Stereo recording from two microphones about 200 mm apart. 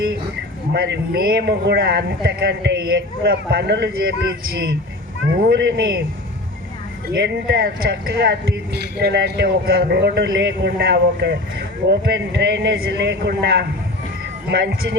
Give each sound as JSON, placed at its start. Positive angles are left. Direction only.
{"t": 0.7, "sound": "a man's voice", "side_deg": -55}
{"t": 5.4, "sound": "a man's voice", "side_deg": -55}
{"t": 7.2, "sound": "speech", "side_deg": -55}